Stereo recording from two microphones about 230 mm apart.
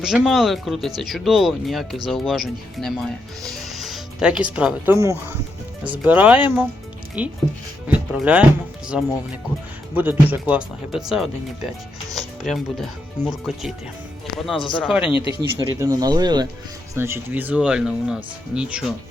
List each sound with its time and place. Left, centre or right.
0.0 s speech: centre
15.1 s speech: left
15.5 s speech: centre